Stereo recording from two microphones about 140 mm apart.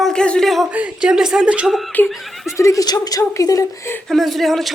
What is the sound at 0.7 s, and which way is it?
Speech, 10° right (ahead or behind).